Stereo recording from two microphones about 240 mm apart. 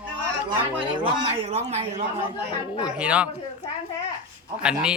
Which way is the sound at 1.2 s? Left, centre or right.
Right.